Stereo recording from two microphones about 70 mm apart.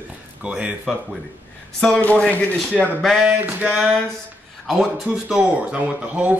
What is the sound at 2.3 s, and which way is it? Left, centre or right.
Speech, left.